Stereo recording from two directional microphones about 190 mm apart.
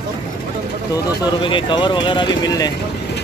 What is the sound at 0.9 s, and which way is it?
Speech, 25° left (ahead or behind).